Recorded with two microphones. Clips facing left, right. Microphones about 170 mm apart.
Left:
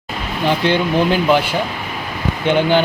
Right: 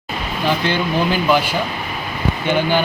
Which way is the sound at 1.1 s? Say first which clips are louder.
Left 1 dB; 20° left (ahead or behind).